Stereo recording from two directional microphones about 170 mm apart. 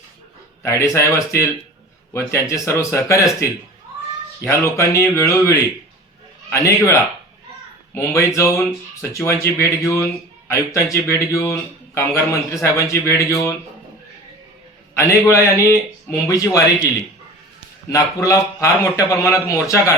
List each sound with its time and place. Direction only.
0.6 s a man's voice: 15° left (ahead or behind)
4.4 s a man's voice: 15° left (ahead or behind)
7.9 s a man's voice: 15° left (ahead or behind)
14.9 s a man's voice: 15° left (ahead or behind)
17.8 s a man's voice: 20° left (ahead or behind)